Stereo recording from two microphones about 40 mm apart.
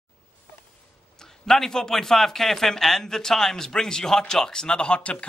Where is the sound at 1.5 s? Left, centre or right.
Centre.